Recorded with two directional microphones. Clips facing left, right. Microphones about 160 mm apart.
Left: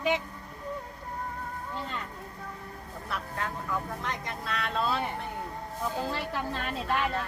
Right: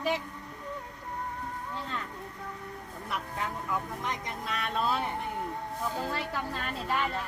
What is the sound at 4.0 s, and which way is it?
Speech, 15° right (ahead or behind).